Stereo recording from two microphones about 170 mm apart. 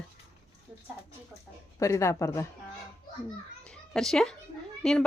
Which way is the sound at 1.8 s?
15° left (ahead or behind).